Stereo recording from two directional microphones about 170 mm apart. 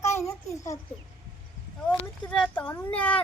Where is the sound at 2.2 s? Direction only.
5° left (ahead or behind).